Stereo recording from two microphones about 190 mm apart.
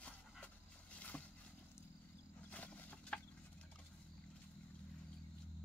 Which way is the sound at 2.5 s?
5° left (ahead or behind).